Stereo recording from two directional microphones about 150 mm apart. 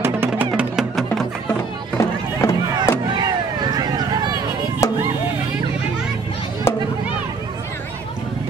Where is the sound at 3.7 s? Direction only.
25° right (ahead or behind).